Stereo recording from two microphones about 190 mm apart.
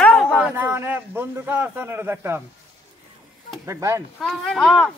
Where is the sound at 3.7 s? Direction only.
15° right (ahead or behind).